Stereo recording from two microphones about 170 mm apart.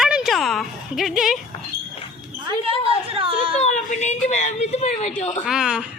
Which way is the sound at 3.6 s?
45° left (ahead or behind).